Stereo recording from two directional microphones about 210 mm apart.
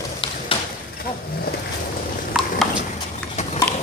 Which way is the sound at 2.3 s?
Centre (ahead or behind).